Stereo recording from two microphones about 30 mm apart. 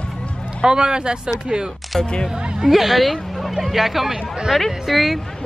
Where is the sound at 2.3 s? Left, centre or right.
Right.